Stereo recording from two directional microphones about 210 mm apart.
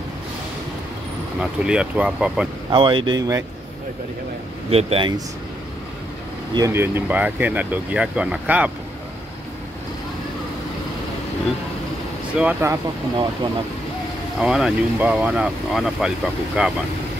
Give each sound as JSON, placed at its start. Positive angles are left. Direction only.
{"t": 1.4, "sound": "speech", "side_deg": -5}
{"t": 2.7, "sound": "speech", "side_deg": -25}
{"t": 4.6, "sound": "speech", "side_deg": -30}
{"t": 6.5, "sound": "speech", "side_deg": -15}
{"t": 12.4, "sound": "speech", "side_deg": -10}
{"t": 14.4, "sound": "speech", "side_deg": -5}